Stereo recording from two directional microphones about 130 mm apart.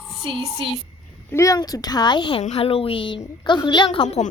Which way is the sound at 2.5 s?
45° left (ahead or behind).